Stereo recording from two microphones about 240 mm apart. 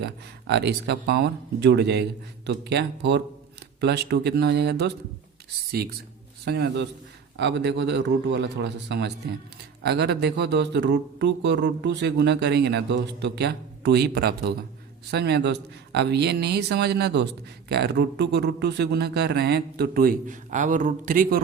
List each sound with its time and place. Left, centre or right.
0.0 s a man's voice: right